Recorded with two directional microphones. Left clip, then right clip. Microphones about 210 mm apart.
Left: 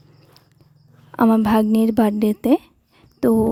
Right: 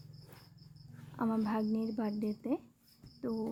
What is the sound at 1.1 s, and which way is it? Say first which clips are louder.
A woman's voice: left 19 dB; 55° left (ahead or behind).